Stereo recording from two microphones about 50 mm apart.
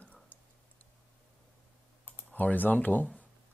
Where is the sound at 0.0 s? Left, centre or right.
Left.